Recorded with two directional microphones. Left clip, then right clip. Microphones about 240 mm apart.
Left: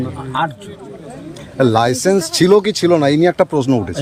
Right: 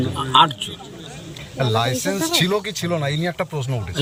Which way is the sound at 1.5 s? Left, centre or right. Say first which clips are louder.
Left 7 dB; left.